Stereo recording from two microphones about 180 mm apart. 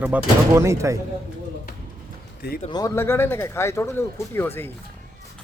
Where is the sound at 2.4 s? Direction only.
60° left (ahead or behind).